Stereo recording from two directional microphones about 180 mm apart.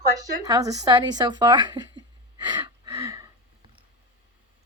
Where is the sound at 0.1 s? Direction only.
20° right (ahead or behind).